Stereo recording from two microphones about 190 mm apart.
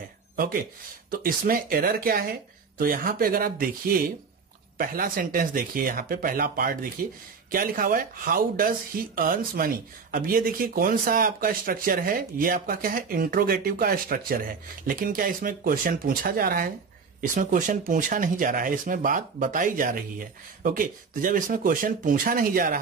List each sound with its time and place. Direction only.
0.4 s speech: 50° right (ahead or behind)